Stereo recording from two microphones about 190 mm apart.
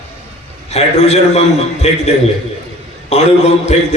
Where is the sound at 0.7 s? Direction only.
35° left (ahead or behind).